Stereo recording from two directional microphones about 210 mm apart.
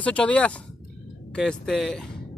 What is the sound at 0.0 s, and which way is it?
Speech, 5° left (ahead or behind).